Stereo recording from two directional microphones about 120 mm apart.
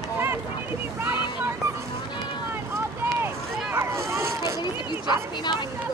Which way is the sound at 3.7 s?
20° right (ahead or behind).